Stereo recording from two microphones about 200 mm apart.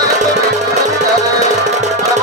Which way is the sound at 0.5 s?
35° right (ahead or behind).